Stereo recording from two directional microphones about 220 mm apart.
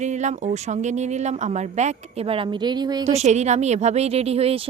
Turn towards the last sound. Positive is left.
turn(degrees=-30)  # may be behind; listen again after turning